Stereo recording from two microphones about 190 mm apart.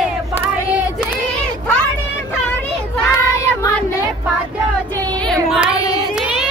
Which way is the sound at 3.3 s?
15° left (ahead or behind).